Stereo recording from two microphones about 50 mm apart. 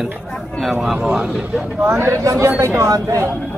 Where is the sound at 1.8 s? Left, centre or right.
Right.